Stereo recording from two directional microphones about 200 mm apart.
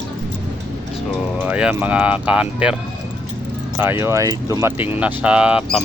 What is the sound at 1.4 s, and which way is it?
Speech, 5° right (ahead or behind).